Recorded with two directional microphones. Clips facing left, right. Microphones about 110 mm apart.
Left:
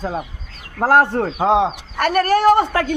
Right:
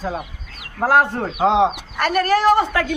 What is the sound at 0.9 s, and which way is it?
Speech, 45° left (ahead or behind).